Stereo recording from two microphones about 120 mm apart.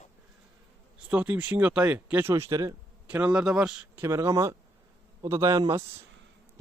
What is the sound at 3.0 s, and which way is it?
Speech, 10° right (ahead or behind).